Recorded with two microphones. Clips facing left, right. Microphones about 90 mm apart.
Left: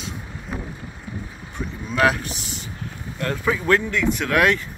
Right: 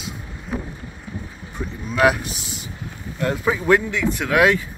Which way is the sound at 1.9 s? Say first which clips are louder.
Right 2 dB; 10° right (ahead or behind).